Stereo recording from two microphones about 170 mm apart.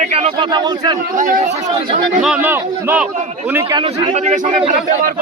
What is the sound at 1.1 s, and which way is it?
Speech, 50° right (ahead or behind).